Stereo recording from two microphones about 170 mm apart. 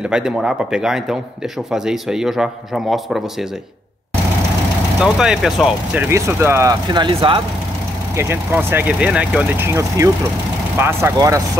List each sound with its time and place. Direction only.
0.0 s a man's voice: 5° right (ahead or behind)
5.0 s a man's voice: 5° right (ahead or behind)
6.0 s speech: 15° right (ahead or behind)
8.2 s speech: 15° right (ahead or behind)